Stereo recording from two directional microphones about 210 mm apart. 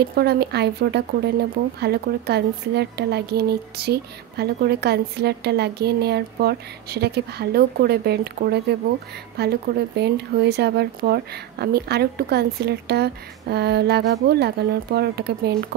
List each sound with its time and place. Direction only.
0.0 s a woman's voice: 50° right (ahead or behind)